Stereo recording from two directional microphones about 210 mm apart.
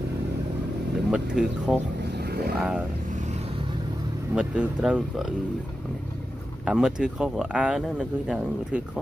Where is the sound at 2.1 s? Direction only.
50° right (ahead or behind).